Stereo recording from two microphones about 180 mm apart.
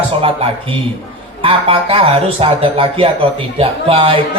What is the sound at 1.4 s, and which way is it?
Speech, 30° right (ahead or behind).